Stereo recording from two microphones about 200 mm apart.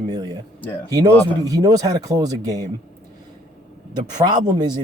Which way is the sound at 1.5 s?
20° right (ahead or behind).